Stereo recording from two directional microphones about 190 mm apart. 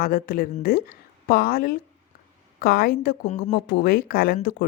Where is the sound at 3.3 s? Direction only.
35° left (ahead or behind).